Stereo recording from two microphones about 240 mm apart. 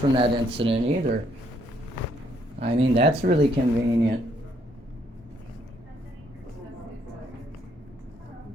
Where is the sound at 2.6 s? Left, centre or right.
Right.